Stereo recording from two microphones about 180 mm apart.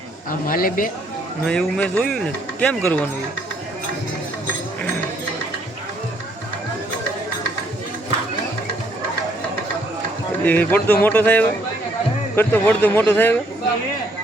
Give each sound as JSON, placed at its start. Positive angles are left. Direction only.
{"t": 0.3, "sound": "speech", "side_deg": 50}
{"t": 1.5, "sound": "speech", "side_deg": 5}
{"t": 10.4, "sound": "speech", "side_deg": 10}